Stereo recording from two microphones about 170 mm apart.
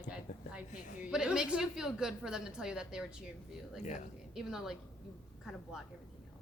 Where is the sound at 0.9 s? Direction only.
5° right (ahead or behind).